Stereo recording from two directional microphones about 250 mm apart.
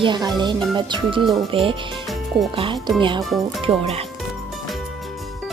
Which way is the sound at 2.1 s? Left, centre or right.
Centre.